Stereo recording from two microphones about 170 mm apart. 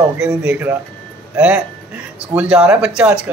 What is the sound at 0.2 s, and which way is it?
Speech, 5° right (ahead or behind).